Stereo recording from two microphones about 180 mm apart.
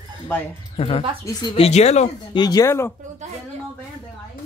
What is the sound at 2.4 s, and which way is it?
Speech, 20° left (ahead or behind).